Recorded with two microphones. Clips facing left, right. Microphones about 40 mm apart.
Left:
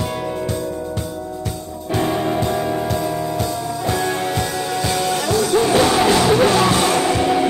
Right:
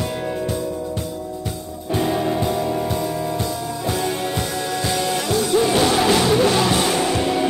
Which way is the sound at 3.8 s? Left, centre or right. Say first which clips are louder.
Left 2 dB; centre.